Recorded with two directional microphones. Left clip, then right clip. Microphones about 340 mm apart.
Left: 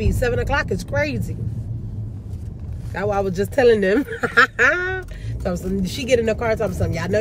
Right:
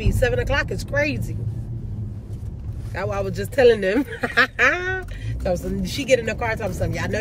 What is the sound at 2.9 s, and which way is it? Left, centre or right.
Speech, centre.